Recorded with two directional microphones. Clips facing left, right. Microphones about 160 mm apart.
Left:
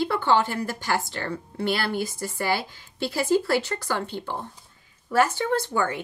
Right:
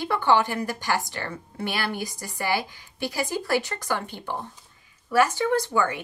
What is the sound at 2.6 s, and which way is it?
Speech, 15° right (ahead or behind).